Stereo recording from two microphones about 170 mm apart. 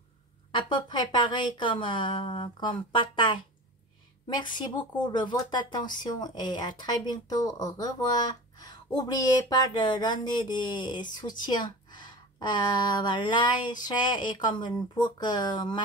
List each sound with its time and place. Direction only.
0.5 s speech: 30° left (ahead or behind)